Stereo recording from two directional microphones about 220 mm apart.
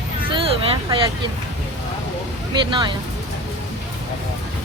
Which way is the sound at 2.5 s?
20° right (ahead or behind).